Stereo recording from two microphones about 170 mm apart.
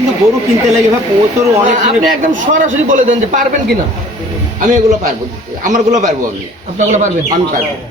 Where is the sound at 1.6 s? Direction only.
50° right (ahead or behind).